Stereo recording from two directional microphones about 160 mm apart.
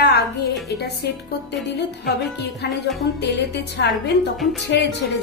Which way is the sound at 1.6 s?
90° left.